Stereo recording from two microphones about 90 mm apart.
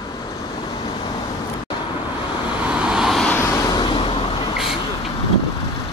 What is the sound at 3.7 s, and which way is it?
Vehicle, 55° left (ahead or behind).